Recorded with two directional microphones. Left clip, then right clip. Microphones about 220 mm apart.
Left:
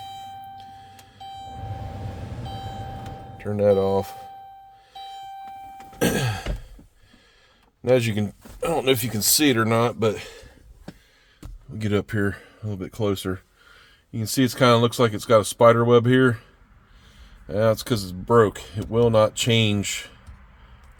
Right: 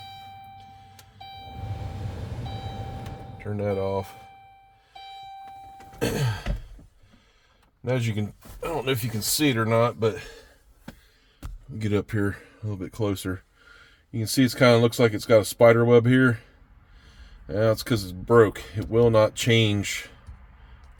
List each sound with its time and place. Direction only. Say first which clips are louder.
3.5 s speech: left 8 dB; 55° left (ahead or behind)
6.0 s throat clearing: left 5 dB; 45° left (ahead or behind)
7.8 s speech: left 8 dB; 55° left (ahead or behind)
11.8 s speech: left 2 dB; 25° left (ahead or behind)
17.4 s speech: left 2 dB; 10° left (ahead or behind)